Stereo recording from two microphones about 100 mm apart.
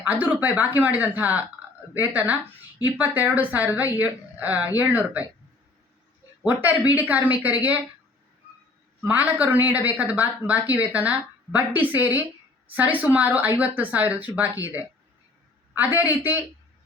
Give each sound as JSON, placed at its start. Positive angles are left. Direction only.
{"t": 0.1, "sound": "speech", "side_deg": -15}
{"t": 6.4, "sound": "speech", "side_deg": -15}
{"t": 9.0, "sound": "a man's voice", "side_deg": -15}